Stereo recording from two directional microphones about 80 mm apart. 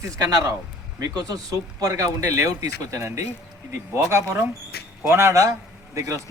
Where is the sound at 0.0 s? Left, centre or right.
Right.